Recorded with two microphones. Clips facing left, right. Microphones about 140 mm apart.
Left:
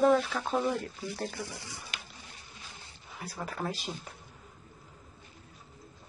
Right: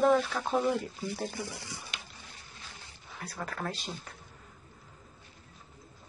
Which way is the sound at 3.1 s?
10° left (ahead or behind).